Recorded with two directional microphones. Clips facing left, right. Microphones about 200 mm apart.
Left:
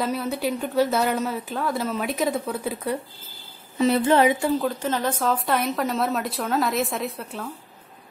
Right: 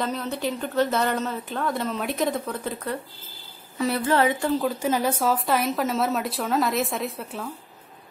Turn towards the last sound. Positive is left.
turn(degrees=0)  # may be behind; listen again after turning